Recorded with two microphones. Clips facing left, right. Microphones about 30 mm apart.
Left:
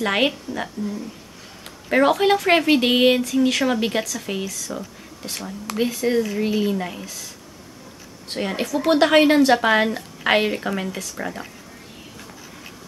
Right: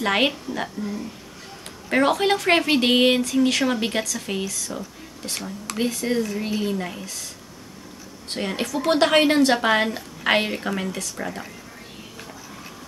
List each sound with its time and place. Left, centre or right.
0.0 s a woman's voice: centre
1.9 s a woman's voice: centre
5.9 s a woman's voice: centre
8.3 s a woman's voice: centre